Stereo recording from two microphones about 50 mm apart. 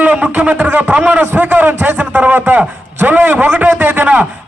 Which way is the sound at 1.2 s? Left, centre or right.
Right.